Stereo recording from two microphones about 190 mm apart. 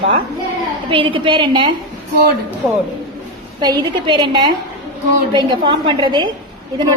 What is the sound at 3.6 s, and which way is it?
A woman's voice, 20° right (ahead or behind).